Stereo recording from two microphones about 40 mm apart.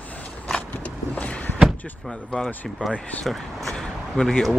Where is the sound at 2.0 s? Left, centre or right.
Centre.